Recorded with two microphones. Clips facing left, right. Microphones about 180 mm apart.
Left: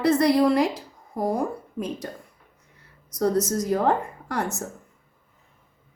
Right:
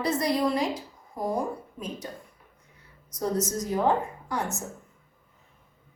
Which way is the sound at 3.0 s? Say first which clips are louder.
Left 6 dB; 75° left (ahead or behind).